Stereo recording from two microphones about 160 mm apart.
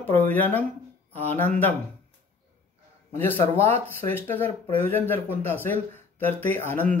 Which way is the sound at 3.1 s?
15° left (ahead or behind).